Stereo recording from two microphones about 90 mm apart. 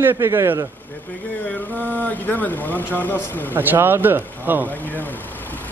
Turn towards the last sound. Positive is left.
turn(degrees=20)  # may be behind; listen again after turning